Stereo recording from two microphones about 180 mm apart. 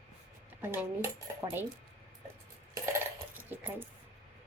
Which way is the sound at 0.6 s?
15° right (ahead or behind).